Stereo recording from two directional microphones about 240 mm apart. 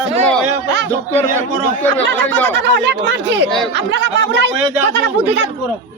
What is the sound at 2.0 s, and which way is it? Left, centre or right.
Speech, right.